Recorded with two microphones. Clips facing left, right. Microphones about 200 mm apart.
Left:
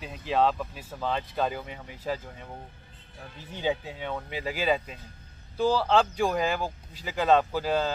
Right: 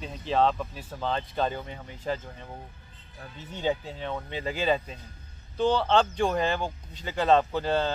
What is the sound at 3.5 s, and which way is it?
Speech, 15° left (ahead or behind).